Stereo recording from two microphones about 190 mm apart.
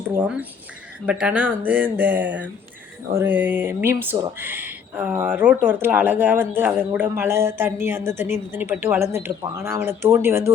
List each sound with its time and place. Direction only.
1.0 s speech: 5° right (ahead or behind)